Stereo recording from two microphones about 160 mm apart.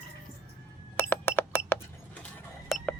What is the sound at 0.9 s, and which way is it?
Cash register, 15° left (ahead or behind).